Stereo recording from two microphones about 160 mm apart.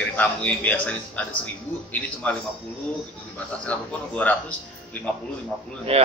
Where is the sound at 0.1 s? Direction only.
10° left (ahead or behind).